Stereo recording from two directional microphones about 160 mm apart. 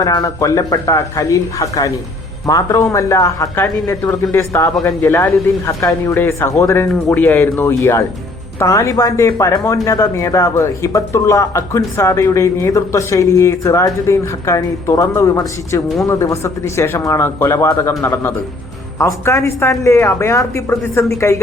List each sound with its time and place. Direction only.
0.0 s speech: 25° left (ahead or behind)